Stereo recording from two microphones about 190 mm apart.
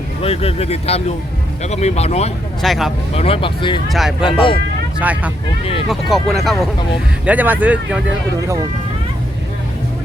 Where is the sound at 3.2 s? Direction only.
30° left (ahead or behind).